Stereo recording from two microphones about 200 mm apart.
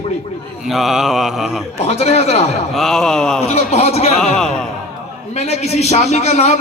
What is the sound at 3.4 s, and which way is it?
Speech, 30° left (ahead or behind).